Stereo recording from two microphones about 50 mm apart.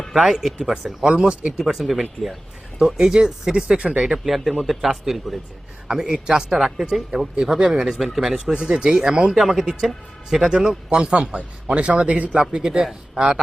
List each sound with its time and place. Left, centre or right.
0.1 s speech: centre
1.5 s speech: centre
5.9 s a man's voice: centre; by 12.4 s right
12.5 s speech: centre